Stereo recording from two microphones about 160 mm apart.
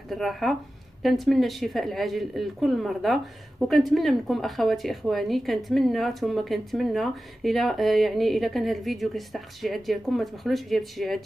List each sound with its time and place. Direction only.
0.1 s speech: centre (ahead or behind)